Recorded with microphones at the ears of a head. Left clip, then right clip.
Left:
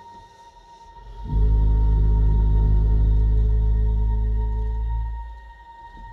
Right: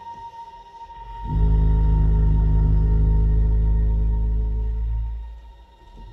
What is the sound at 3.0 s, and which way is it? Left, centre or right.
Music, right.